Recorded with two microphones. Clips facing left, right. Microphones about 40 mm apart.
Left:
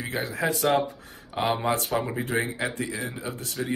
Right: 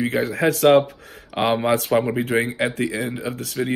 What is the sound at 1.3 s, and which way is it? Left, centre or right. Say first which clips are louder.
Speech: right 6 dB; right.